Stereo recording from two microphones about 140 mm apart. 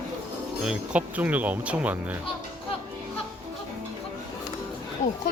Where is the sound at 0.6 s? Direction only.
5° right (ahead or behind).